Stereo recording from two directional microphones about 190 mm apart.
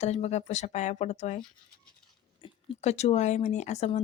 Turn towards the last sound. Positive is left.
turn(degrees=35)  # may be behind; listen again after turning